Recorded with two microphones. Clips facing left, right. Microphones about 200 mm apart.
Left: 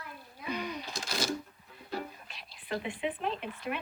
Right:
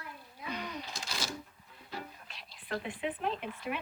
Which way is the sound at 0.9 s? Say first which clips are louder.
Left 4 dB; 40° left (ahead or behind).